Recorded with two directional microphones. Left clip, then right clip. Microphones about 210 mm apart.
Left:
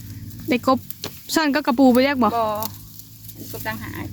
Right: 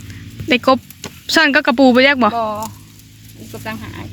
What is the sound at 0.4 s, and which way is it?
A woman's voice, 5° left (ahead or behind).